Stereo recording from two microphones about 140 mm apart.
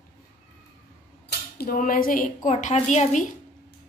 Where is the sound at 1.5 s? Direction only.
85° left.